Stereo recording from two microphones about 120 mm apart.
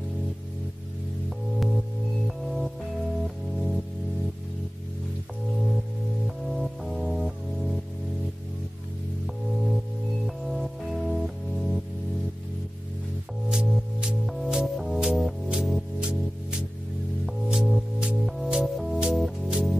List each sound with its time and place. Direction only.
2.2 s music: centre (ahead or behind)
6.2 s music: centre (ahead or behind)
10.2 s music: centre (ahead or behind)
13.5 s music: 5° right (ahead or behind)